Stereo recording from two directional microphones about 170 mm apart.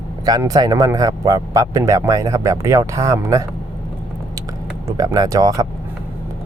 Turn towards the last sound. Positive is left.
turn(degrees=-20)  # may be behind; listen again after turning